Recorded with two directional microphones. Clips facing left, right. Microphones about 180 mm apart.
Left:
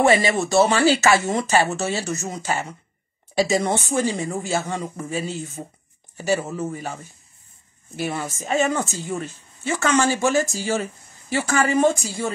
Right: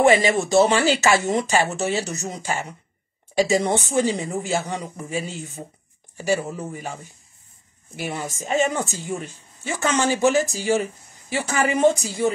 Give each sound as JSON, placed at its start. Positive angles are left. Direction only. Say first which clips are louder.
{"t": 0.0, "sound": "speech", "louder": "right 1 dB", "side_deg": -15}
{"t": 3.4, "sound": "speech", "louder": "right 1 dB", "side_deg": -15}